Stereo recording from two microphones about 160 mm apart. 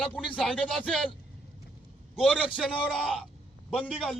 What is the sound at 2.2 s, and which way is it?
A man's voice, 5° right (ahead or behind).